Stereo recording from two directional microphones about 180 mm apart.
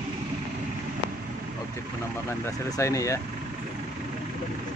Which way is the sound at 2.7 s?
15° left (ahead or behind).